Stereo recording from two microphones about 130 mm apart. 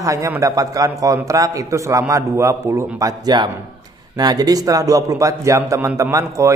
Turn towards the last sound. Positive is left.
turn(degrees=-25)  # may be behind; listen again after turning